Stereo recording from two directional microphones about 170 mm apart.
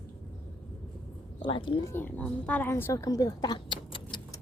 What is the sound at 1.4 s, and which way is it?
Speech, 30° left (ahead or behind).